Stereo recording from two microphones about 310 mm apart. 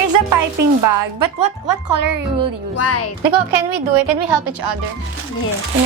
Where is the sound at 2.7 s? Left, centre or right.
Left.